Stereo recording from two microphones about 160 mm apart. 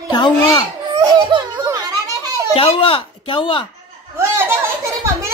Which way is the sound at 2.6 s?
35° left (ahead or behind).